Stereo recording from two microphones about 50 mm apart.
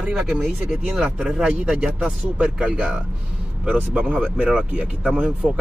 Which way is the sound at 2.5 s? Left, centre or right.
Right.